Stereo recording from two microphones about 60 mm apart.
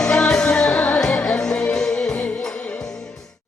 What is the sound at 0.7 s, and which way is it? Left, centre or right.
Music, left.